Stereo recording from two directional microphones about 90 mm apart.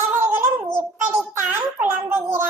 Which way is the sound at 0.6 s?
25° right (ahead or behind).